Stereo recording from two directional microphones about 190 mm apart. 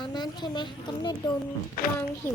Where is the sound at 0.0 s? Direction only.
25° left (ahead or behind).